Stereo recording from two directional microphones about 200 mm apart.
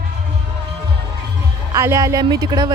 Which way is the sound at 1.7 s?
15° right (ahead or behind).